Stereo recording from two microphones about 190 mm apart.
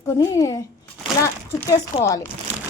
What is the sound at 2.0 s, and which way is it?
Speech, 15° left (ahead or behind).